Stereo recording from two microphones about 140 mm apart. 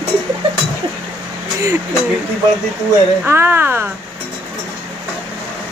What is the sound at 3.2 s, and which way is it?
Speech, 15° right (ahead or behind).